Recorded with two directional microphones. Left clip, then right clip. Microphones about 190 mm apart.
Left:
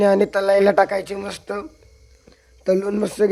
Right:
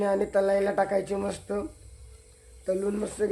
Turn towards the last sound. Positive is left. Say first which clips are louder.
# left 9 dB
turn(degrees=50)  # may be behind; listen again after turning